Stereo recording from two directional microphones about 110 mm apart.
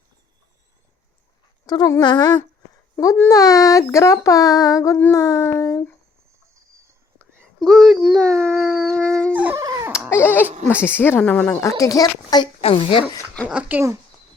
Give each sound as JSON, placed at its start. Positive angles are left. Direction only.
{"t": 1.6, "sound": "speech", "side_deg": 40}
{"t": 2.9, "sound": "a sound", "side_deg": 30}
{"t": 3.2, "sound": "speech", "side_deg": 35}
{"t": 7.6, "sound": "speech", "side_deg": 0}
{"t": 8.2, "sound": "dog", "side_deg": 10}
{"t": 9.3, "sound": "dog", "side_deg": -15}
{"t": 9.9, "sound": "baby cry", "side_deg": -10}
{"t": 10.2, "sound": "speech", "side_deg": 20}
{"t": 11.8, "sound": "speech", "side_deg": 35}
{"t": 12.6, "sound": "speech", "side_deg": 55}
{"t": 13.5, "sound": "speech", "side_deg": -15}